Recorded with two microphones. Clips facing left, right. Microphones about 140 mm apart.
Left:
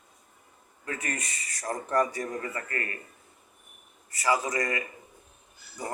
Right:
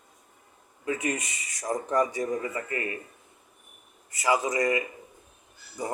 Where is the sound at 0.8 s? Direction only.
15° right (ahead or behind).